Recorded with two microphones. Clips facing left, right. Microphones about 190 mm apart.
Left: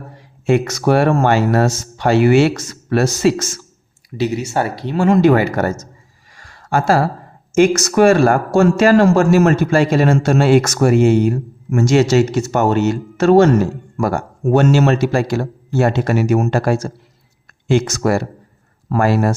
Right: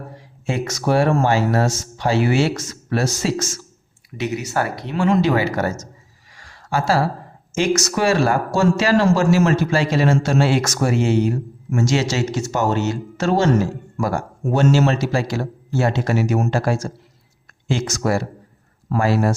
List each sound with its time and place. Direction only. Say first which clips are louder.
0.2 s speech: left 9 dB; 60° left (ahead or behind)
4.2 s speech: left 4 dB; 30° left (ahead or behind)
4.9 s speech: left 5 dB; 50° left (ahead or behind)
6.3 s a sound: left 4 dB; 50° left (ahead or behind)
7.5 s speech: left 7 dB; 55° left (ahead or behind)